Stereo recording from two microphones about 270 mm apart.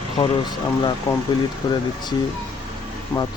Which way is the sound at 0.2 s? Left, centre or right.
Centre.